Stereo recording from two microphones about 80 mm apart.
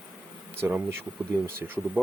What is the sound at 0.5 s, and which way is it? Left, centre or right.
Speech, right.